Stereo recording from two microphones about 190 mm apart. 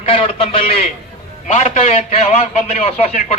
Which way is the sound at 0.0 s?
30° left (ahead or behind).